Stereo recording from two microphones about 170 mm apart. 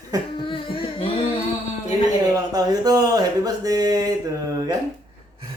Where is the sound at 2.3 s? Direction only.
20° right (ahead or behind).